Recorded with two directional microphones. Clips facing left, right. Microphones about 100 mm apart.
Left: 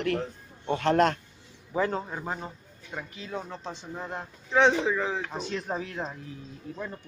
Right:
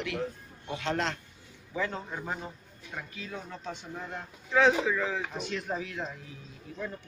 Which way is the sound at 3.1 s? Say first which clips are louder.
Left 4 dB; 30° left (ahead or behind).